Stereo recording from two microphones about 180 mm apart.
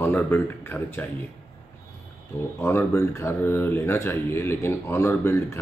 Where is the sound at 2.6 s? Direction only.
15° left (ahead or behind).